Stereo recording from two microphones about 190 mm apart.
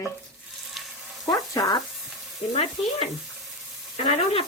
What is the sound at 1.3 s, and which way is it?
Speech, 20° left (ahead or behind).